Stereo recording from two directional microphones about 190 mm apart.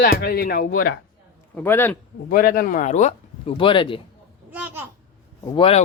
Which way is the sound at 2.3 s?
50° left (ahead or behind).